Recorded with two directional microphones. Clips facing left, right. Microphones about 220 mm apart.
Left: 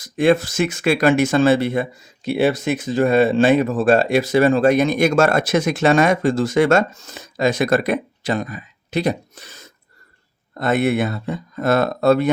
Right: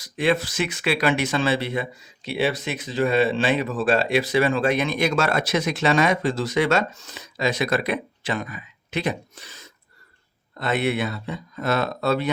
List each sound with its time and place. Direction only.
0.0 s speech: 45° left (ahead or behind)